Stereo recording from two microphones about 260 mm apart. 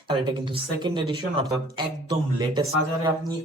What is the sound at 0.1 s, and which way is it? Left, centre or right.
Speech, centre.